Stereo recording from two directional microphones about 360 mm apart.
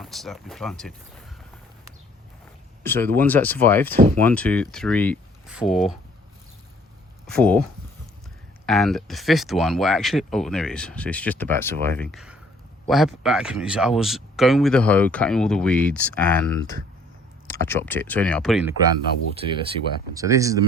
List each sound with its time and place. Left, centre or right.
0.0 s speech: centre
2.8 s speech: centre
7.3 s speech: centre
8.6 s speech: centre
16.6 s speech: right
17.5 s speech: centre
19.4 s speech: centre